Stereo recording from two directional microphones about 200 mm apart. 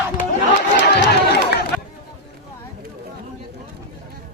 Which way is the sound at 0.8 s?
60° left (ahead or behind).